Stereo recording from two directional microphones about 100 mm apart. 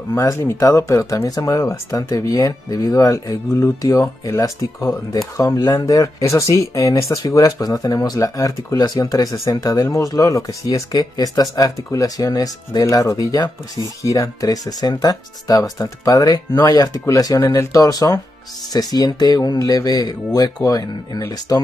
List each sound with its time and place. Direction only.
0.2 s speech: 30° left (ahead or behind)